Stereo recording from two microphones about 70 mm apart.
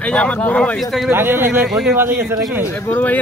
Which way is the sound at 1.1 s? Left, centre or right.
Right.